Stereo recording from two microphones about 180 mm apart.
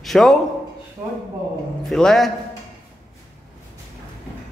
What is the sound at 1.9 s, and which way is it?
Speech, centre (ahead or behind).